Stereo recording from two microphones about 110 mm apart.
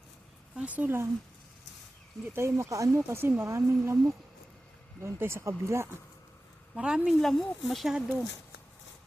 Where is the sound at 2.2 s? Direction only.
20° right (ahead or behind).